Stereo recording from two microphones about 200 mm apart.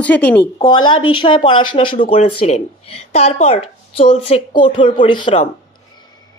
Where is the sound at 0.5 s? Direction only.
25° left (ahead or behind).